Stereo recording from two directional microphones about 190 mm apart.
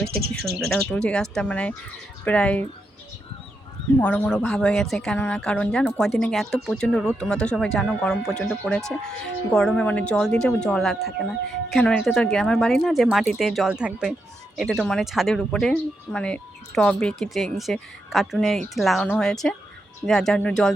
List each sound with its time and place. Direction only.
0.1 s speech: 55° right (ahead or behind)
0.7 s speech: 5° left (ahead or behind)
4.0 s speech: 5° left (ahead or behind)